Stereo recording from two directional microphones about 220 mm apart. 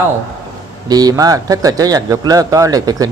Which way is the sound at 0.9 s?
15° right (ahead or behind).